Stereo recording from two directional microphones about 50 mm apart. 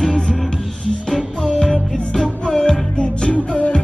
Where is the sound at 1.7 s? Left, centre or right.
Centre.